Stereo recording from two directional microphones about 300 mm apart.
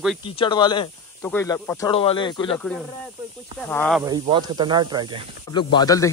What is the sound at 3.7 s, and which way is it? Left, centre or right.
Speech, centre.